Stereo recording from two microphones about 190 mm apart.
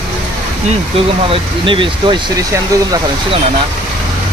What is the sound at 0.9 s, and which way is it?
Speech, 30° right (ahead or behind).